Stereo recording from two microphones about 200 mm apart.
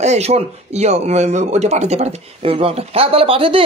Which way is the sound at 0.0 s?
35° right (ahead or behind).